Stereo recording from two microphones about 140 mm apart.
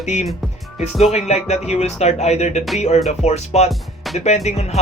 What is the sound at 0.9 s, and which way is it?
Speech, 50° left (ahead or behind).